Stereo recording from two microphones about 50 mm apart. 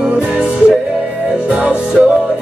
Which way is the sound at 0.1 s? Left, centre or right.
Centre.